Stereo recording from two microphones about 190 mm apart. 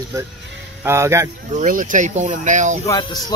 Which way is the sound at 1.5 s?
45° right (ahead or behind).